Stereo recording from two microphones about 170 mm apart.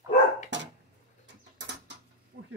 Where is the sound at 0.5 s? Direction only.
90° right.